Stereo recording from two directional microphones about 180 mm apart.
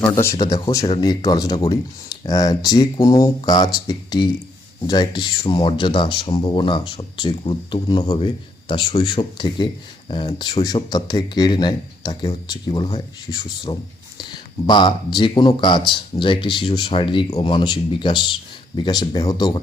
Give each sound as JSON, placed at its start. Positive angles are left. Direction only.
{"t": 0.0, "sound": "speech", "side_deg": 15}